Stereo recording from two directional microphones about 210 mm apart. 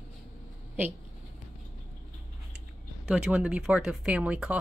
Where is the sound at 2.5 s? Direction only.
5° right (ahead or behind).